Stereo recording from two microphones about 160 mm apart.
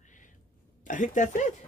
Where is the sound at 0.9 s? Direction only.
50° left (ahead or behind).